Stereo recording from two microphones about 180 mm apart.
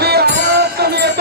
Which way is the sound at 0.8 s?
65° right (ahead or behind).